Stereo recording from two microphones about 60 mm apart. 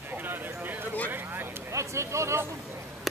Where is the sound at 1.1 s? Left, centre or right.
Right.